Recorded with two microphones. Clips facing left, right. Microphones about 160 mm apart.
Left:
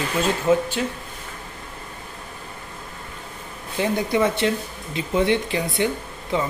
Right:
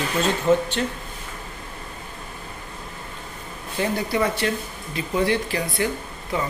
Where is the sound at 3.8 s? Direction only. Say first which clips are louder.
Left 2 dB; 20° left (ahead or behind).